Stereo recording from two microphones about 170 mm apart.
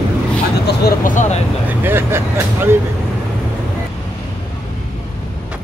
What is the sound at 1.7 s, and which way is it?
Speech, 10° right (ahead or behind).